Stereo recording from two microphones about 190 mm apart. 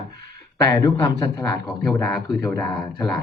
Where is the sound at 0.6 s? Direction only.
20° left (ahead or behind).